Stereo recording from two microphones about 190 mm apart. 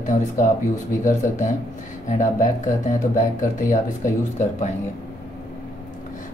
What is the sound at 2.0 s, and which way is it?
Speech, 40° left (ahead or behind).